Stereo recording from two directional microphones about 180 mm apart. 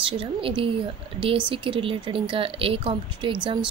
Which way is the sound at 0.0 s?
30° right (ahead or behind).